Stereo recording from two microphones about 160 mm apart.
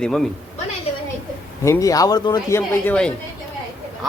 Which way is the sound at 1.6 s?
20° left (ahead or behind).